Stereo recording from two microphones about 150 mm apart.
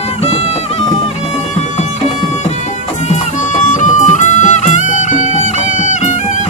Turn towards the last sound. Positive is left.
turn(degrees=55)  # may be behind; listen again after turning